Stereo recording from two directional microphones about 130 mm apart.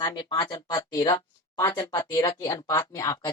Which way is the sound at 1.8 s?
35° left (ahead or behind).